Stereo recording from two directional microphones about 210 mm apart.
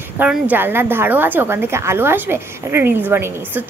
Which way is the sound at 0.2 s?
10° right (ahead or behind).